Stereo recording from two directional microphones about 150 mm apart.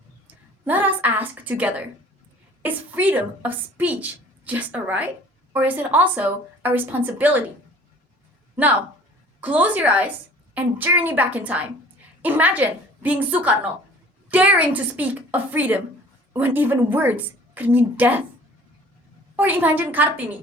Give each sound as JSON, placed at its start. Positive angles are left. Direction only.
{"t": 0.6, "sound": "a sound", "side_deg": -10}
{"t": 2.6, "sound": "a woman's voice", "side_deg": -10}
{"t": 9.4, "sound": "a woman's voice", "side_deg": -10}
{"t": 19.4, "sound": "a woman's voice", "side_deg": -10}